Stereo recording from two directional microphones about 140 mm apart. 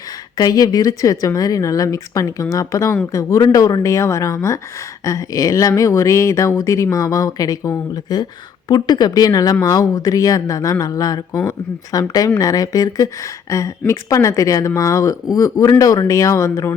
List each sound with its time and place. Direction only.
0.3 s speech: 25° left (ahead or behind)